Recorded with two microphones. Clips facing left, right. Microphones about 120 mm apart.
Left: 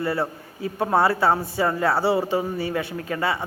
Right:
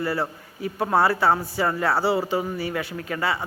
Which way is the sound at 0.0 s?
25° left (ahead or behind).